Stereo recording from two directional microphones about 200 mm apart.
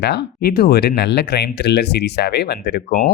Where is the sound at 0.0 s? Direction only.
55° left (ahead or behind).